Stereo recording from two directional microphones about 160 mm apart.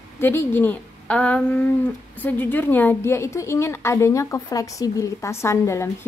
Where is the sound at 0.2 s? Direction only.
15° left (ahead or behind).